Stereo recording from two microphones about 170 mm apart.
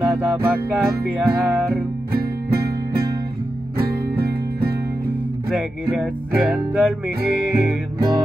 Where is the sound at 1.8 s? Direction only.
65° right (ahead or behind).